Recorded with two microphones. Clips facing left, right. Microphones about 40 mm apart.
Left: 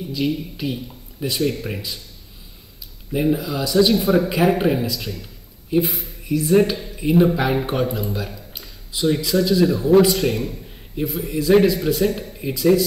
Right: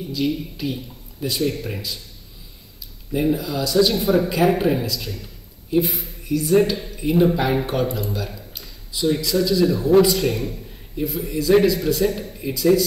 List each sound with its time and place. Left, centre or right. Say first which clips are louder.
0.1 s a man's voice: even; centre
3.1 s a man's voice: left 1 dB; centre
5.9 s speech: even; centre
6.2 s a man's voice: left 1 dB; centre